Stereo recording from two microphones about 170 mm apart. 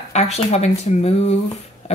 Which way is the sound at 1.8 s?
35° left (ahead or behind).